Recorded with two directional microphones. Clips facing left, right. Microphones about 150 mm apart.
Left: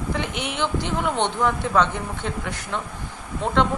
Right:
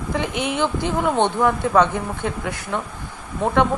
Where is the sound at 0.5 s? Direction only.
10° right (ahead or behind).